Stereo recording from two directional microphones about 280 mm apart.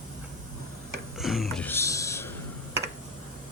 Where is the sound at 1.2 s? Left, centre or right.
Centre.